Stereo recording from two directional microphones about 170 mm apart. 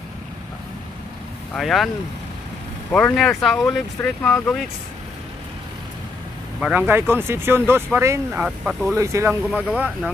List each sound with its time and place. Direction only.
1.5 s speech: centre (ahead or behind)
2.9 s speech: 5° left (ahead or behind)
6.6 s speech: 10° right (ahead or behind)
8.9 s speech: 15° right (ahead or behind)
9.5 s speech: 5° right (ahead or behind)